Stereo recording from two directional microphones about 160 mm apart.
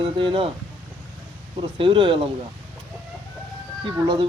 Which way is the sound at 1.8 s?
35° right (ahead or behind).